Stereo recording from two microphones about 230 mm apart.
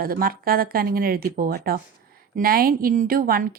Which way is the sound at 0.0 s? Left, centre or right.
Right.